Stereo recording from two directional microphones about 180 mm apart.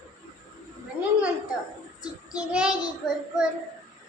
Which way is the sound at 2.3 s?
5° right (ahead or behind).